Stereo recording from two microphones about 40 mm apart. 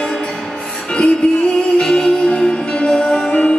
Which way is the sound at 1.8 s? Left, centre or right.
Left.